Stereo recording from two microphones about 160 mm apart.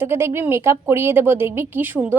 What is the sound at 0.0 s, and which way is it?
Speech, 15° right (ahead or behind).